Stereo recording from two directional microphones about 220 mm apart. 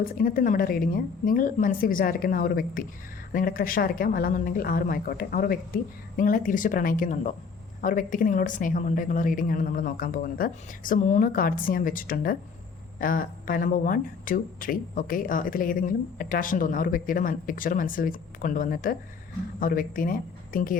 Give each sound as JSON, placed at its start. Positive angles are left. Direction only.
{"t": 0.0, "sound": "speech", "side_deg": 40}